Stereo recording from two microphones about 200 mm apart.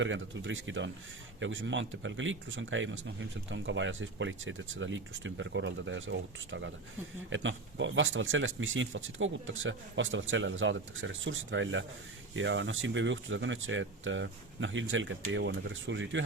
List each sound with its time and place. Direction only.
0.0 s speech: 70° right (ahead or behind)